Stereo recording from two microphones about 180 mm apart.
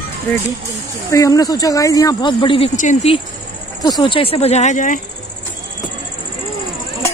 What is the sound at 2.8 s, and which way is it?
Speech, 45° left (ahead or behind).